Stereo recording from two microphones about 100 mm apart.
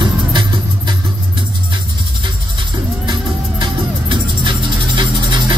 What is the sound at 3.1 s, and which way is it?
Music, 50° right (ahead or behind).